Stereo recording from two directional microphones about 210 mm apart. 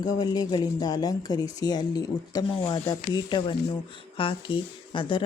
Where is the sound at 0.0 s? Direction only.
20° left (ahead or behind).